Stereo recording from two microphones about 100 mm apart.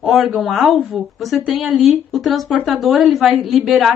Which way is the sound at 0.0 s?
Centre (ahead or behind).